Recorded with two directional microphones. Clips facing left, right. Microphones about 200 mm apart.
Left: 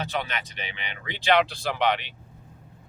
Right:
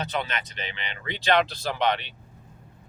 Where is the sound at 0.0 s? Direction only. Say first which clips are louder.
Even; 10° left (ahead or behind).